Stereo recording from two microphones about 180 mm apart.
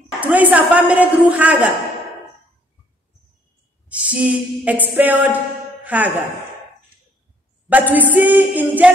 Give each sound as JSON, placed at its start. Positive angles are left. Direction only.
{"t": 0.2, "sound": "a woman's voice", "side_deg": -10}
{"t": 4.0, "sound": "a woman's voice", "side_deg": -10}
{"t": 7.7, "sound": "a woman's voice", "side_deg": -10}